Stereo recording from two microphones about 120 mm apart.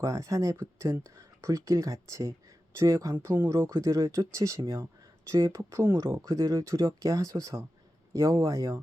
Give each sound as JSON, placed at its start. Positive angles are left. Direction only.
{"t": 0.0, "sound": "speech", "side_deg": -25}